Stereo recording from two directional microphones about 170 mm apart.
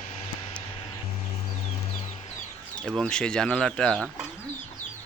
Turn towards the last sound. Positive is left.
turn(degrees=0)  # may be behind; listen again after turning